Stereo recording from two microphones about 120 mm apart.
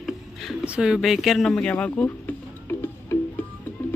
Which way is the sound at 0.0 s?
5° right (ahead or behind).